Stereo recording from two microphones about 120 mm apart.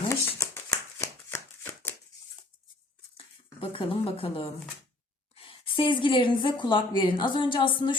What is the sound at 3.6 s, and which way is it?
Speech, 50° left (ahead or behind).